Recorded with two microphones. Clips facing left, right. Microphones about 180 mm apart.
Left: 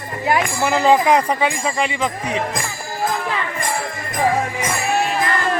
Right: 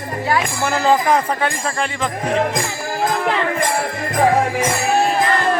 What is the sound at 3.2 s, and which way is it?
Music, 70° right (ahead or behind).